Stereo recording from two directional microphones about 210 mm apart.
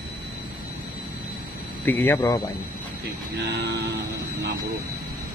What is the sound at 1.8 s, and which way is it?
Speech, 10° left (ahead or behind).